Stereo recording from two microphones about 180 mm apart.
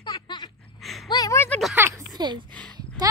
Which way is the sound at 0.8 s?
Centre (ahead or behind).